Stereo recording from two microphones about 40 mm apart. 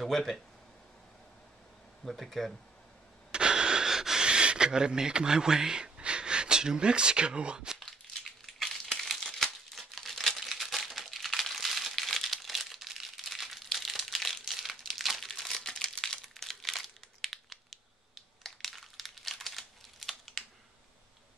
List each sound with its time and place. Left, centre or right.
0.0 s speech: centre
2.0 s speech: centre
3.3 s wheeze: right
4.3 s speech: right
8.2 s a sound: centre
8.9 s crumpling: centre
15.7 s crumpling: centre
16.3 s crumpling: centre